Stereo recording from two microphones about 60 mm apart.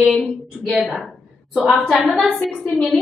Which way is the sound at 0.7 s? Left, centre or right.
Centre.